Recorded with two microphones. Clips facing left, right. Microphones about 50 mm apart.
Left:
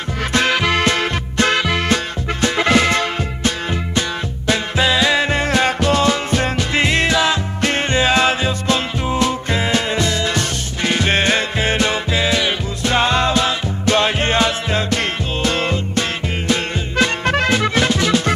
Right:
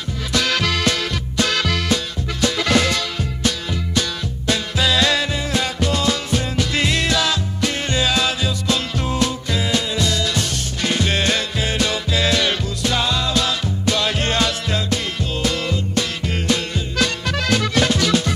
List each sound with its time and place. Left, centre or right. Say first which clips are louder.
0.3 s music: left 4 dB; left
1.6 s music: left 3 dB; left
5.3 s music: left 6 dB; left
6.7 s music: left 4 dB; left
7.6 s music: left 4 dB; left; by 12.5 s centre
12.8 s music: left 6 dB; left
15.0 s music: left 3 dB; left